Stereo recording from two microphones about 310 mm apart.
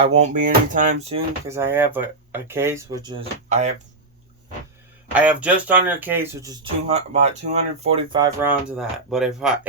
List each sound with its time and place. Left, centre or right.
0.0 s speech: right
1.5 s speech: centre
5.1 s speech: centre